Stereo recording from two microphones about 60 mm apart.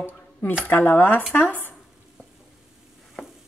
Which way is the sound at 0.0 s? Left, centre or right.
Left.